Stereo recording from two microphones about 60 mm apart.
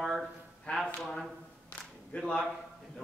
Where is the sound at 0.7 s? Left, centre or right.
Left.